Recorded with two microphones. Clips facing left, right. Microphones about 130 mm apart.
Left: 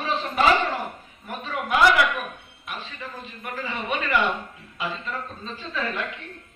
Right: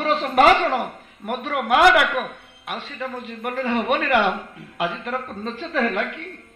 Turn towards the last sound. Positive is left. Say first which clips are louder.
# right 7 dB
turn(degrees=-65)  # may be behind; listen again after turning